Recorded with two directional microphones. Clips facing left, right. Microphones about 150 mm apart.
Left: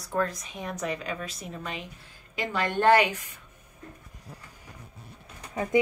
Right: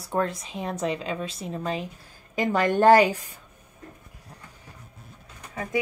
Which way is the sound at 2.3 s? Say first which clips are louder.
Right 6 dB; 45° right (ahead or behind).